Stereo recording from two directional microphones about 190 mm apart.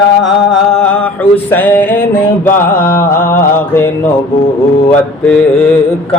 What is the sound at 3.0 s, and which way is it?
Mantra, 10° left (ahead or behind).